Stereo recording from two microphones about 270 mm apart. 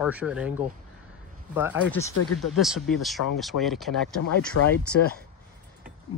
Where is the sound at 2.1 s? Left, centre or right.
Left.